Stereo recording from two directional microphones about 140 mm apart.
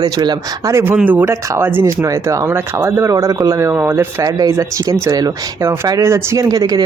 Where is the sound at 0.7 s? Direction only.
15° right (ahead or behind).